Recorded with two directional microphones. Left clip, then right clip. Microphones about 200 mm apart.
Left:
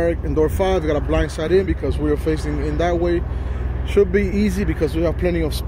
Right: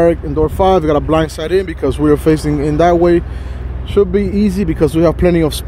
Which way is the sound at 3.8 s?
30° right (ahead or behind).